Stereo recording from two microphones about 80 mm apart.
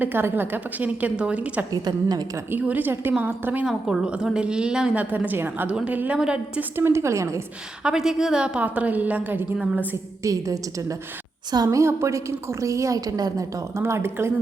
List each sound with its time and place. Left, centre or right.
0.0 s a woman's voice: right
1.7 s a woman's voice: right
2.5 s a woman's voice: right
3.7 s a woman's voice: centre
5.0 s a woman's voice: right
6.6 s a woman's voice: right
7.9 s a woman's voice: centre
10.2 s a woman's voice: right
11.8 s a woman's voice: right